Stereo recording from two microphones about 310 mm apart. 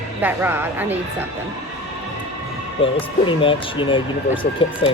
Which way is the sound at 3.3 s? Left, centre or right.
Centre.